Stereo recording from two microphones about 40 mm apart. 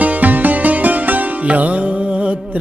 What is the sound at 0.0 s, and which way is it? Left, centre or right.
Music, right.